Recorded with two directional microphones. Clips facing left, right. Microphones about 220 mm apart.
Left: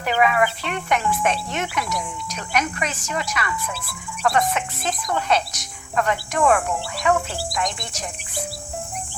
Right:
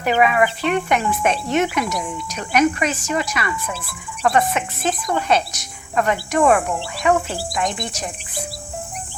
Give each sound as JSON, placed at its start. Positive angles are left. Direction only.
{"t": 0.0, "sound": "speech", "side_deg": -15}
{"t": 5.9, "sound": "cricket", "side_deg": -15}